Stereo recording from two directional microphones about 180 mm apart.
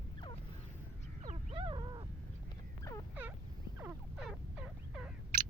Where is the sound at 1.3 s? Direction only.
30° right (ahead or behind).